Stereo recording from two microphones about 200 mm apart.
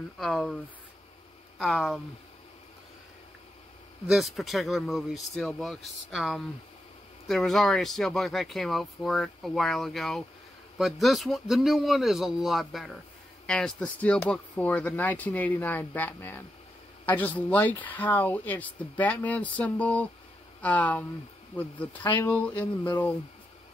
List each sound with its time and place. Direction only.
0.2 s speech: centre (ahead or behind)
1.6 s speech: centre (ahead or behind)
4.1 s speech: centre (ahead or behind)
22.0 s speech: 20° left (ahead or behind)
22.6 s speech: 10° left (ahead or behind)